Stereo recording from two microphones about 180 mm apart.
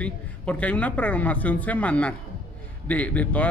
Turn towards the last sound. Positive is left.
turn(degrees=10)  # may be behind; listen again after turning